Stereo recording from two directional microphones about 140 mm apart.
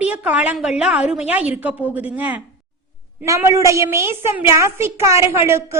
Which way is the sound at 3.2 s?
20° right (ahead or behind).